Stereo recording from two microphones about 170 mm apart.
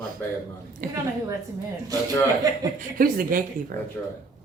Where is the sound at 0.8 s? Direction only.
60° right (ahead or behind).